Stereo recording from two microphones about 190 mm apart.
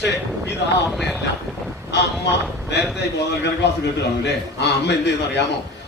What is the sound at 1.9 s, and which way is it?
Speech, 65° left (ahead or behind).